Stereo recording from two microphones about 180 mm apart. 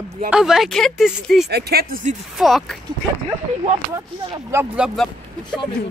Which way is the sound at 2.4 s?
Centre (ahead or behind).